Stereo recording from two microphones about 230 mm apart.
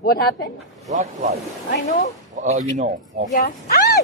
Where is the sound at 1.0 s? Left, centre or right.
Right.